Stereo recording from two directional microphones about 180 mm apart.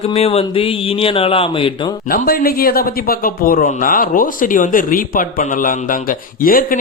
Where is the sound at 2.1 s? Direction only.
55° left (ahead or behind).